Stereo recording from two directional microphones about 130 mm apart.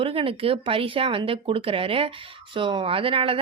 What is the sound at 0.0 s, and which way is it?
A woman's voice, 45° right (ahead or behind).